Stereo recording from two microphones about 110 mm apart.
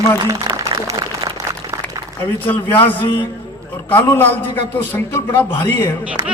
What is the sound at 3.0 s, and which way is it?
Speech, 50° left (ahead or behind).